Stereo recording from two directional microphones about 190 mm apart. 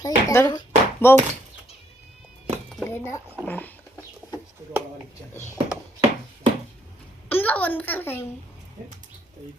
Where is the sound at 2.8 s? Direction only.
15° left (ahead or behind).